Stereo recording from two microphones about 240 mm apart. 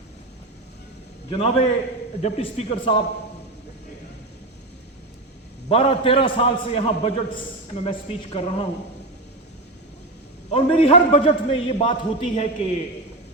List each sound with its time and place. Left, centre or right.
1.3 s a man's voice: left
5.6 s a man's voice: left
10.5 s a man's voice: left